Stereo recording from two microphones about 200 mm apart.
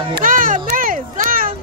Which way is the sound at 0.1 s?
45° right (ahead or behind).